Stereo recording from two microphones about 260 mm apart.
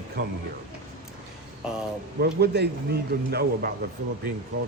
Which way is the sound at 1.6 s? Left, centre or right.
Centre.